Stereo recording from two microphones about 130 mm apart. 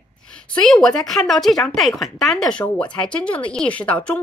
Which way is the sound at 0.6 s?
5° left (ahead or behind).